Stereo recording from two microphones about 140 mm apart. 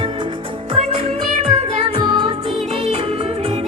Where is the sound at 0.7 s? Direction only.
50° right (ahead or behind).